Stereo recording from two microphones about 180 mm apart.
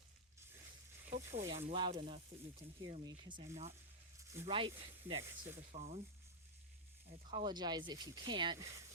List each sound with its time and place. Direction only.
0.3 s zipper: 15° right (ahead or behind)
1.2 s speech: 15° right (ahead or behind)
1.7 s speech: 25° right (ahead or behind)
3.4 s speech: 40° right (ahead or behind)
4.2 s snake: 15° right (ahead or behind)
4.8 s speech: 30° right (ahead or behind)
5.2 s speech: 10° right (ahead or behind)
5.7 s speech: 40° right (ahead or behind)
7.3 s speech: 25° right (ahead or behind)